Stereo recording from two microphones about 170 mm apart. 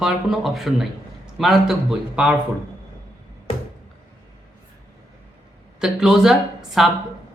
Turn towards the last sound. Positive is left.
turn(degrees=0)  # may be behind; listen again after turning